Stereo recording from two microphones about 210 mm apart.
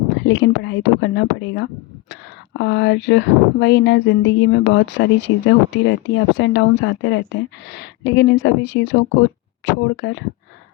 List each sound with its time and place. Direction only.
0.2 s speech: 60° left (ahead or behind)